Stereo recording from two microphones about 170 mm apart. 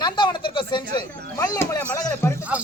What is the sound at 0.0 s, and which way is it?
Speech, 25° left (ahead or behind).